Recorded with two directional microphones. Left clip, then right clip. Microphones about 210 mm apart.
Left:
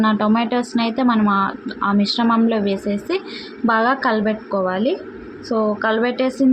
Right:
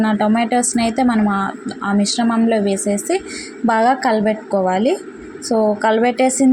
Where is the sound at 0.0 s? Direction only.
15° right (ahead or behind).